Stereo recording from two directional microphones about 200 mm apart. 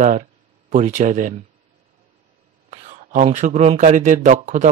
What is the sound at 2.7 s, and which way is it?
Speech, 35° right (ahead or behind).